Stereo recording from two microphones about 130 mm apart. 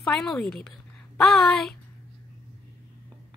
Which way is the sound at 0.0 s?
5° left (ahead or behind).